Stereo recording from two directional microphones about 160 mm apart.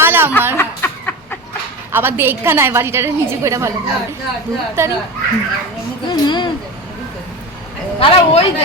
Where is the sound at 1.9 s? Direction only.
15° right (ahead or behind).